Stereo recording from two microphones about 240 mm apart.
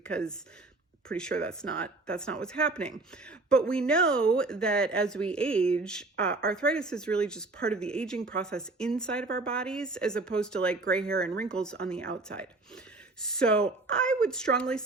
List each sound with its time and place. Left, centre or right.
0.0 s speech: centre
11.1 s speech: right
11.4 s speech: centre